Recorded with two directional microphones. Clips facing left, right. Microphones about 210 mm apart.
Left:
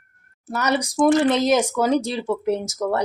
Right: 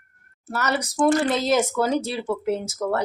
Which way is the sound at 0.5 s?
15° left (ahead or behind).